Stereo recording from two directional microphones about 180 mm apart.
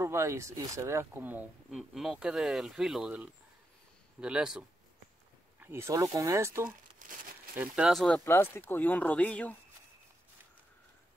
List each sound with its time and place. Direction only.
0.0 s speech: 15° right (ahead or behind)
7.0 s crumpling: 45° right (ahead or behind)
7.5 s speech: 10° right (ahead or behind)
8.3 s speech: 15° left (ahead or behind)